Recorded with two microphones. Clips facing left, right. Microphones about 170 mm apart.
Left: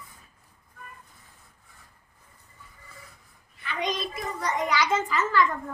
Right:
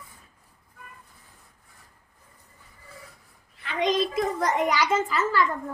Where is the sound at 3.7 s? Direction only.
90° right.